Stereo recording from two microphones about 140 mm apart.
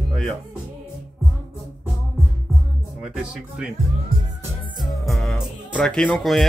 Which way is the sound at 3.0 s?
5° right (ahead or behind).